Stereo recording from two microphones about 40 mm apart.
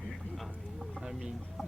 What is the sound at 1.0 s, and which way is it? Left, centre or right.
Speech, centre.